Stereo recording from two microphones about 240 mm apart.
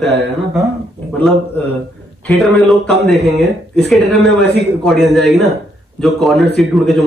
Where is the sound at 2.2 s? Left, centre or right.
Centre.